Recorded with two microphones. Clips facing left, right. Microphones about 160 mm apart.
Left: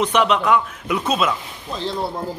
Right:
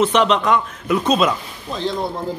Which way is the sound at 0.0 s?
10° left (ahead or behind).